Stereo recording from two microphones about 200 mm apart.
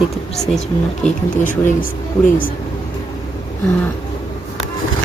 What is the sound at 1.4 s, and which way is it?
Speech, 40° left (ahead or behind).